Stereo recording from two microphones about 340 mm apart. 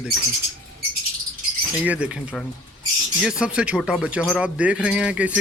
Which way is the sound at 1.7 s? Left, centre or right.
Centre.